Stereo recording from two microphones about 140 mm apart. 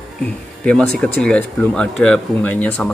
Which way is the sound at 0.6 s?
5° left (ahead or behind).